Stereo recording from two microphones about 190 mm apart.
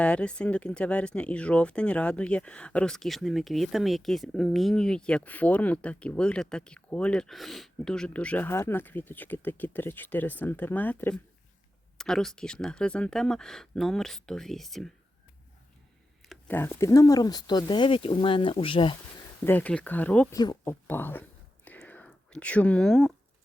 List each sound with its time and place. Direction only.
0.0 s speech: 5° left (ahead or behind)
16.5 s speech: 10° left (ahead or behind); by 18.9 s 25° left (ahead or behind)
19.5 s speech: 10° left (ahead or behind)
20.3 s speech: 20° left (ahead or behind)
20.8 s whispering: 10° left (ahead or behind)